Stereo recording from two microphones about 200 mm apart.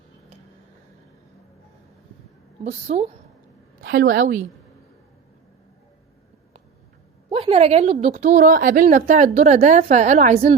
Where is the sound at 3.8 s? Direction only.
65° right (ahead or behind).